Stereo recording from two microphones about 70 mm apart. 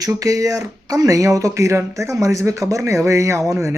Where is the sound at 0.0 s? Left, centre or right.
Right.